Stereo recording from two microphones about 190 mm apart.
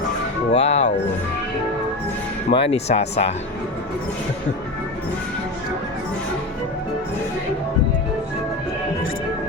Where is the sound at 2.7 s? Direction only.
35° left (ahead or behind).